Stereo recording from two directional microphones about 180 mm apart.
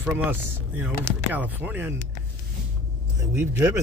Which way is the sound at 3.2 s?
10° right (ahead or behind).